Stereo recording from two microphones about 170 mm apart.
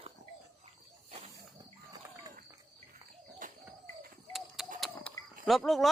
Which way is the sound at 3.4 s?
50° right (ahead or behind).